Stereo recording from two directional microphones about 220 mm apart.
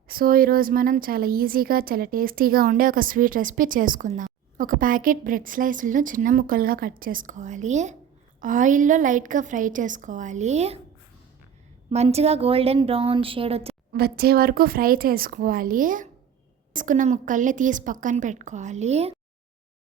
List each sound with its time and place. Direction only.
0.1 s a woman's voice: 40° right (ahead or behind)
11.9 s speech: 25° right (ahead or behind)
13.9 s a woman's voice: 45° right (ahead or behind); by 19.1 s 30° right (ahead or behind)